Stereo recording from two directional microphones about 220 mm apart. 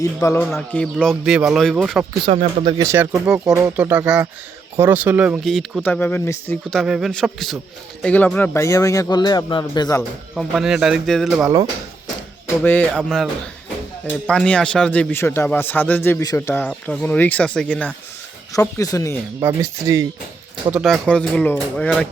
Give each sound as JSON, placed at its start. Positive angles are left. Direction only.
{"t": 0.0, "sound": "speech", "side_deg": 15}
{"t": 2.2, "sound": "speech", "side_deg": -25}
{"t": 2.8, "sound": "a man's voice", "side_deg": -10}
{"t": 10.3, "sound": "speech", "side_deg": 0}
{"t": 12.6, "sound": "a man's voice", "side_deg": 10}
{"t": 14.3, "sound": "a man's voice", "side_deg": 5}
{"t": 19.4, "sound": "speech", "side_deg": -10}
{"t": 20.7, "sound": "speech", "side_deg": -5}